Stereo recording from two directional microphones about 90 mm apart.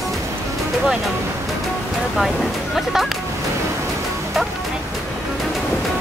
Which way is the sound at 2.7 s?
Centre (ahead or behind).